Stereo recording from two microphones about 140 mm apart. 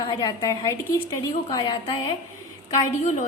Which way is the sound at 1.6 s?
35° left (ahead or behind).